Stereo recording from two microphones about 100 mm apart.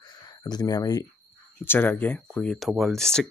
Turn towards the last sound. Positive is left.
turn(degrees=5)  # may be behind; listen again after turning